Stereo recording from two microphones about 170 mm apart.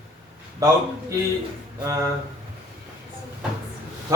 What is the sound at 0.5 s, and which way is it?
Speech, 20° right (ahead or behind).